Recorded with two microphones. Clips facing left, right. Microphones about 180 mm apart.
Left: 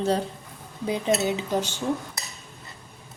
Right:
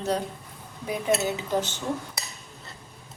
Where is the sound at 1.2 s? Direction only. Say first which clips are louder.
Left 1 dB; 20° left (ahead or behind).